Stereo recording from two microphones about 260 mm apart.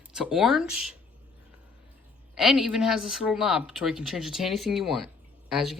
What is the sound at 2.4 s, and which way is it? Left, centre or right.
Speech, centre.